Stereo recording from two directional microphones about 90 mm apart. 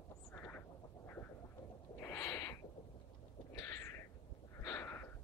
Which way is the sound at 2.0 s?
30° left (ahead or behind).